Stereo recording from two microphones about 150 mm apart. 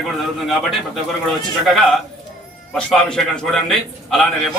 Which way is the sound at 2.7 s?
Centre (ahead or behind).